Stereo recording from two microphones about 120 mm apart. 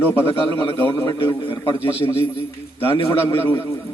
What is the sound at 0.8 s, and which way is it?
Speech, 20° left (ahead or behind).